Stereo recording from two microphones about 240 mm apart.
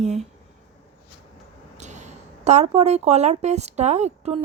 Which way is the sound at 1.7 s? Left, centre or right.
Right.